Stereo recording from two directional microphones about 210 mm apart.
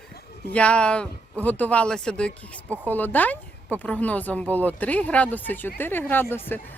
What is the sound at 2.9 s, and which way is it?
Speech, 10° left (ahead or behind).